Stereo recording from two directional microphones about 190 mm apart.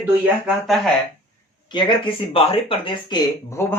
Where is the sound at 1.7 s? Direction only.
25° left (ahead or behind).